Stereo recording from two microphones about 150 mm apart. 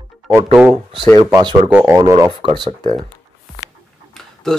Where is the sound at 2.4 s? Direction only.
30° right (ahead or behind).